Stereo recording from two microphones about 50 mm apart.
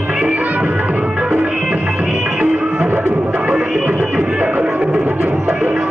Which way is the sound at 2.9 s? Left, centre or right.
Right.